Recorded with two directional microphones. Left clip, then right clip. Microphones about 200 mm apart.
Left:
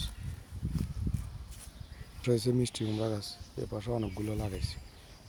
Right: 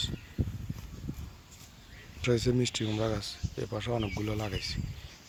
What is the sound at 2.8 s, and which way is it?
Speech, 10° right (ahead or behind).